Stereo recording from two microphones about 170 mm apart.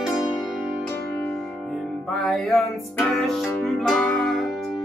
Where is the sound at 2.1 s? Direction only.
Centre (ahead or behind).